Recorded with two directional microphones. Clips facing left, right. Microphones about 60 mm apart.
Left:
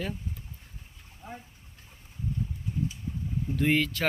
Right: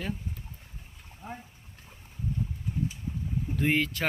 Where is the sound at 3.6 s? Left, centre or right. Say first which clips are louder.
Left 1 dB; centre.